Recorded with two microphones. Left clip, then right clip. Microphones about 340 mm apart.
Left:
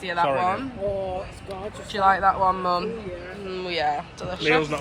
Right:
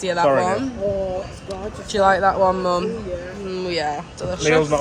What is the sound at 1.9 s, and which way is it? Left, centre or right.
Speech, centre.